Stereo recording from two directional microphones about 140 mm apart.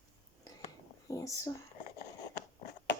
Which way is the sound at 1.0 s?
25° left (ahead or behind).